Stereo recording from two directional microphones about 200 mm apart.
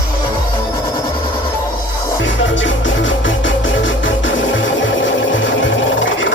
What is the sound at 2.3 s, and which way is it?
Music, 70° left (ahead or behind).